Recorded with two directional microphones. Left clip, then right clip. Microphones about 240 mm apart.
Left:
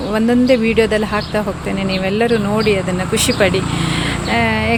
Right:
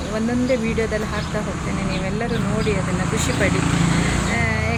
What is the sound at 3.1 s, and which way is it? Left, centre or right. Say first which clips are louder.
Speech: left 8 dB; left.